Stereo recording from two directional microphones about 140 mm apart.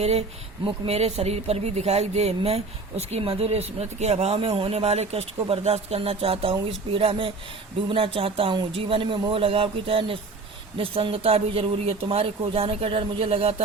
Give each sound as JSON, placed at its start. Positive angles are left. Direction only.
{"t": 0.0, "sound": "speech", "side_deg": -50}